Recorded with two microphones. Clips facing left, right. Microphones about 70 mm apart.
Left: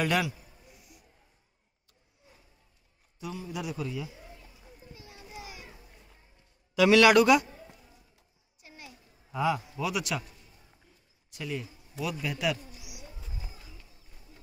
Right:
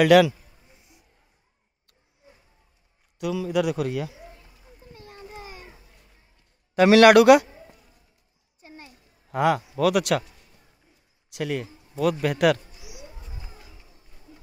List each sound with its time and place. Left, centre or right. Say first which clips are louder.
0.0 s a man's voice: right 13 dB; right
0.7 s music: left 1 dB; right
3.2 s a man's voice: right 13 dB; right
4.9 s children playing: right 5 dB; right
6.7 s a man's voice: right 6 dB; right
8.5 s a sound: right 4 dB; right
9.3 s a man's voice: right 7 dB; right
9.8 s a man's voice: right 10 dB; right
11.2 s speech: right 8 dB; right
12.0 s a man's voice: right 11 dB; right